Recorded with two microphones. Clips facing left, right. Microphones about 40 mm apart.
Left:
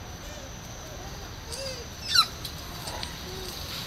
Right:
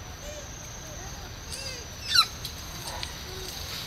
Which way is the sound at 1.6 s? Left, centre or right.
Centre.